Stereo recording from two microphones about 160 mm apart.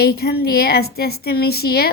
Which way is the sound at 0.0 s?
75° left (ahead or behind).